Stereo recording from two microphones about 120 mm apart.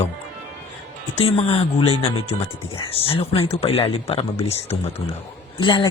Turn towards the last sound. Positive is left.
turn(degrees=40)  # may be behind; listen again after turning